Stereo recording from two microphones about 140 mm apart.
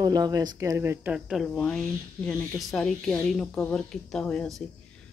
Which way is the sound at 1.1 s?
5° right (ahead or behind).